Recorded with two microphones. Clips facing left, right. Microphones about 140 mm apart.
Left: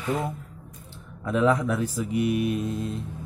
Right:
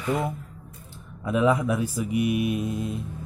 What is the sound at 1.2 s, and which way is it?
A man's voice, 10° right (ahead or behind).